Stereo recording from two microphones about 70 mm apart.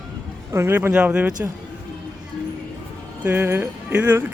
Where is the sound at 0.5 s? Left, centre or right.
Right.